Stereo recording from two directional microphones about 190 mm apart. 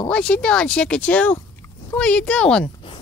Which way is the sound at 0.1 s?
5° left (ahead or behind).